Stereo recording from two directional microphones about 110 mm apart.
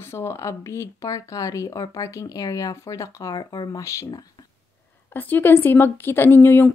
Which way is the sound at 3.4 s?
40° left (ahead or behind).